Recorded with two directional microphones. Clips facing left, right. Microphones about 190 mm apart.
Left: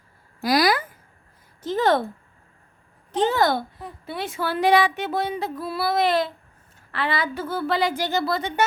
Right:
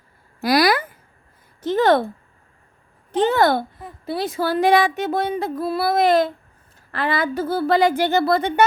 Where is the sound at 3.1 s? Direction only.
60° right (ahead or behind).